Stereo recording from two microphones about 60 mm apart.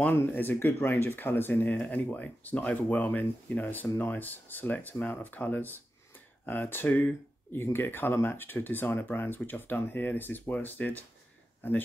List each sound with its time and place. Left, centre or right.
0.3 s speech: left
1.7 s speech: left